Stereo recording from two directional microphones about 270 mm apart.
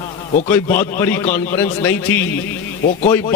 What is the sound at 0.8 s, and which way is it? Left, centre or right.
A man's voice, centre.